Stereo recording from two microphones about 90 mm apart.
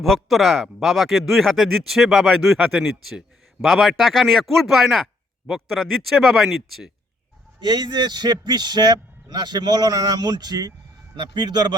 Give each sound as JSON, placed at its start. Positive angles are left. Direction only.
{"t": 0.0, "sound": "speech", "side_deg": 0}
{"t": 7.6, "sound": "a man's voice", "side_deg": -55}